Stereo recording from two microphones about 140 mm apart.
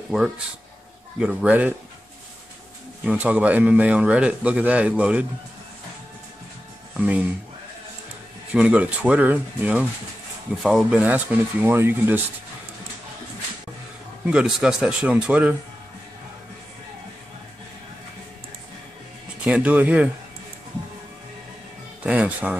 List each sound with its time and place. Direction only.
1.2 s a man's voice: 5° right (ahead or behind)
3.1 s a man's voice: 10° right (ahead or behind)
7.0 s a man's voice: 10° right (ahead or behind)
8.5 s a man's voice: 10° right (ahead or behind)
14.2 s a man's voice: 5° right (ahead or behind)
19.4 s a man's voice: 10° right (ahead or behind)
22.0 s speech: 10° right (ahead or behind)